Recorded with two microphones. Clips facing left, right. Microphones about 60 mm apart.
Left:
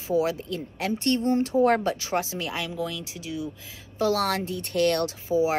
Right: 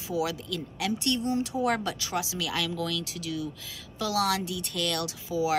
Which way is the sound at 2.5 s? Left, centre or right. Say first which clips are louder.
Even; left.